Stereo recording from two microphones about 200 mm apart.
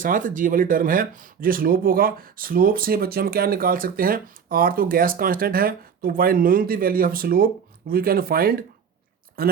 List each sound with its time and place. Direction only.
0.0 s speech: 40° right (ahead or behind)